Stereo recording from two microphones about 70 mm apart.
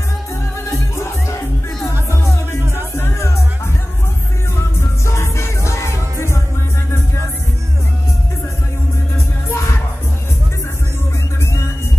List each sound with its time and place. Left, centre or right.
0.7 s music: left
5.0 s music: left
9.5 s music: left